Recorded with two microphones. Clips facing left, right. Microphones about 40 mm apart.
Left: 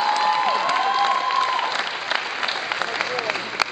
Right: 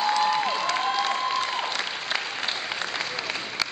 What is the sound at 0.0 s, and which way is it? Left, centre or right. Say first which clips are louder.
Applause: left 3 dB; centre.